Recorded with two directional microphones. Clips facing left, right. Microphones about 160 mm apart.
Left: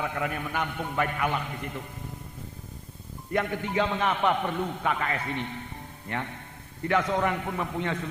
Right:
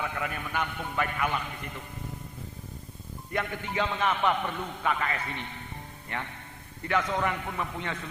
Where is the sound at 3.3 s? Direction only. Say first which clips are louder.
Left 4 dB; 40° left (ahead or behind).